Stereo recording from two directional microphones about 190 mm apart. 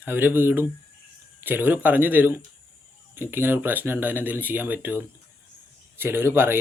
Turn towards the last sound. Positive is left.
turn(degrees=-10)  # may be behind; listen again after turning